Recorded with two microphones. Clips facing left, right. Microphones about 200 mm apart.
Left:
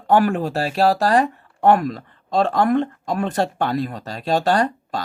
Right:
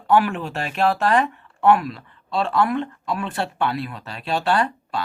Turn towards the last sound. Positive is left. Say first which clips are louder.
# left 2 dB
turn(degrees=40)  # may be behind; listen again after turning